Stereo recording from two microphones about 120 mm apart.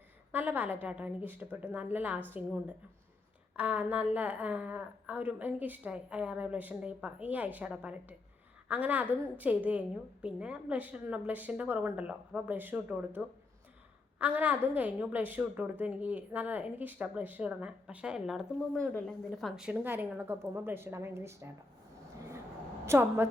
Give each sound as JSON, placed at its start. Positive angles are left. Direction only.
{"t": 0.3, "sound": "a woman's voice", "side_deg": -15}
{"t": 3.5, "sound": "a woman's voice", "side_deg": -15}
{"t": 18.8, "sound": "a woman's voice", "side_deg": 5}
{"t": 22.9, "sound": "a woman's voice", "side_deg": -20}